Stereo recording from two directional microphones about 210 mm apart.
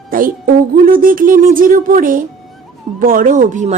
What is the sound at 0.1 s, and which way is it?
Speech, 40° right (ahead or behind).